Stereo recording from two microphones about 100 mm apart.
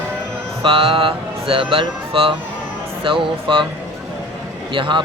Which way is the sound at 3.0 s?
60° right (ahead or behind).